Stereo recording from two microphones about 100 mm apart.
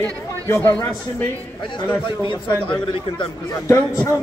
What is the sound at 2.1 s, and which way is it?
Speech, 55° left (ahead or behind).